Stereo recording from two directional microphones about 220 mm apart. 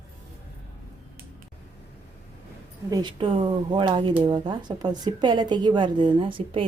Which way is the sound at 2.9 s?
20° right (ahead or behind).